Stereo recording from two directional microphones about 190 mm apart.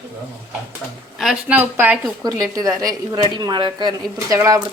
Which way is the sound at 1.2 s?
5° right (ahead or behind).